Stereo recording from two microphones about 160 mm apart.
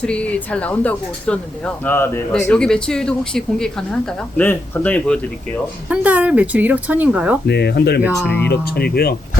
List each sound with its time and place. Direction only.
0.0 s speech: 5° left (ahead or behind)
5.9 s speech: 10° right (ahead or behind)
7.4 s speech: 90° left
8.2 s speech: 10° left (ahead or behind)
8.4 s speech: 75° left (ahead or behind)